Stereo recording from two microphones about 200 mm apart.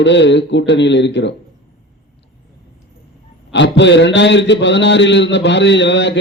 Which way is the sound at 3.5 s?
60° left (ahead or behind).